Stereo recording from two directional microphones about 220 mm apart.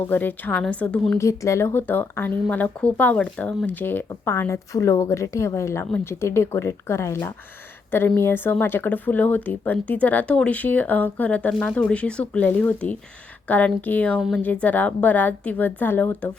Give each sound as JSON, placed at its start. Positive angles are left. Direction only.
{"t": 0.1, "sound": "speech", "side_deg": 10}